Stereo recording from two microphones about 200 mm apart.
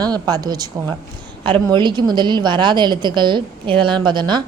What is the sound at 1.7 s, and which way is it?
A woman's voice, 20° right (ahead or behind).